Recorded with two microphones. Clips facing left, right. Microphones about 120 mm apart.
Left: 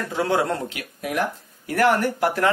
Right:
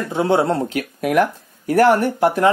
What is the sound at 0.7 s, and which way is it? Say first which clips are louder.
Speech: right 11 dB; 45° right (ahead or behind).